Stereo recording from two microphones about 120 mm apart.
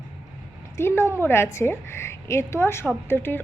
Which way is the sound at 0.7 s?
20° left (ahead or behind).